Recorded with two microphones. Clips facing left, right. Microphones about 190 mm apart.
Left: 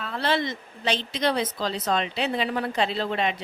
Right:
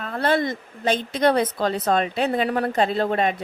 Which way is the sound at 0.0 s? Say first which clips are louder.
Right 4 dB; 50° right (ahead or behind).